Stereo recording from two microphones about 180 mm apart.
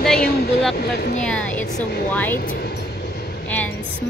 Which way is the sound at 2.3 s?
55° left (ahead or behind).